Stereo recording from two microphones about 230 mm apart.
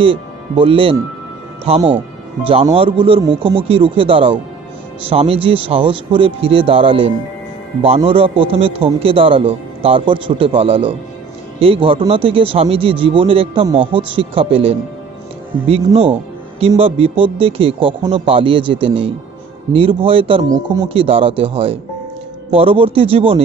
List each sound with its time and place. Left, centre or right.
0.0 s a man's voice: right